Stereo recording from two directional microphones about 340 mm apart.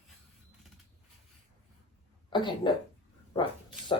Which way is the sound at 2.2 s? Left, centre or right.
Centre.